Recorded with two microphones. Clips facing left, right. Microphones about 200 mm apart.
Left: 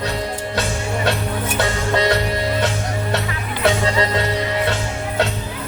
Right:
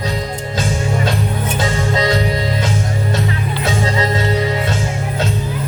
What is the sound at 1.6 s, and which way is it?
Music, 65° left (ahead or behind).